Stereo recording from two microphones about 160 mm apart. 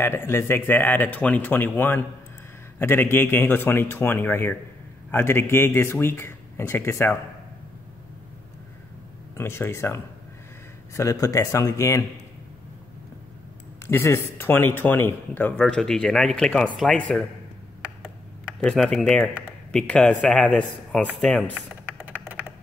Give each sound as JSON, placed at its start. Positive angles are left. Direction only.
{"t": 0.0, "sound": "speech", "side_deg": 15}
{"t": 9.3, "sound": "speech", "side_deg": 15}
{"t": 13.8, "sound": "speech", "side_deg": 15}
{"t": 18.6, "sound": "speech", "side_deg": 5}
{"t": 21.9, "sound": "a sound", "side_deg": -10}